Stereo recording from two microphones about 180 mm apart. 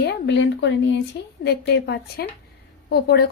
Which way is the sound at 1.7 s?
70° left (ahead or behind).